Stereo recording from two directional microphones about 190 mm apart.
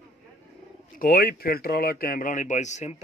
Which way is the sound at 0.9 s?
50° left (ahead or behind).